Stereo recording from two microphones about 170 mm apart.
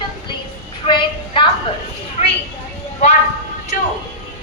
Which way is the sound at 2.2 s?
40° left (ahead or behind).